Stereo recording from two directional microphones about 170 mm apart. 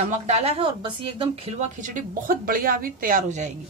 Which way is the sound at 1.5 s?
50° right (ahead or behind).